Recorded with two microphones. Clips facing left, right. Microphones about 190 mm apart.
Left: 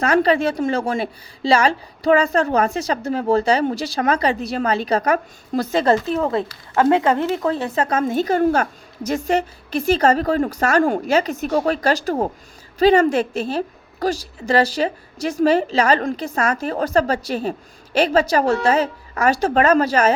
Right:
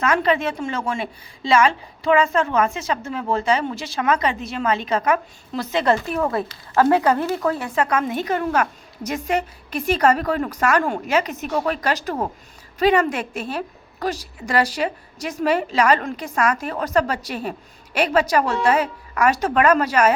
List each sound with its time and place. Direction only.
0.0 s a woman's voice: 35° left (ahead or behind)